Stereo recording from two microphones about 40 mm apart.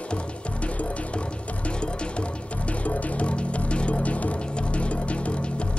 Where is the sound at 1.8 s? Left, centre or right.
Left.